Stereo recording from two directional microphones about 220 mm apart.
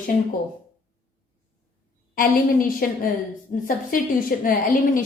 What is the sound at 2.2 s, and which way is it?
A woman's voice, 40° left (ahead or behind).